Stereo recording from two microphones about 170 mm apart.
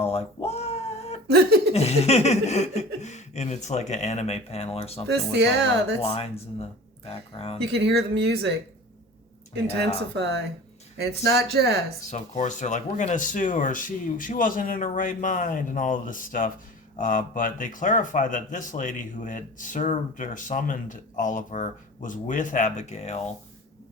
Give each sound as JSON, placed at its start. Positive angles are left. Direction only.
{"t": 0.0, "sound": "a sound", "side_deg": 35}
{"t": 0.4, "sound": "cat", "side_deg": 40}
{"t": 1.3, "sound": "a sound", "side_deg": -70}
{"t": 1.7, "sound": "speech", "side_deg": 40}
{"t": 5.0, "sound": "speech", "side_deg": -90}
{"t": 6.0, "sound": "speech", "side_deg": 35}
{"t": 7.6, "sound": "speech", "side_deg": -75}
{"t": 11.0, "sound": "speech", "side_deg": -75}
{"t": 12.1, "sound": "speech", "side_deg": 45}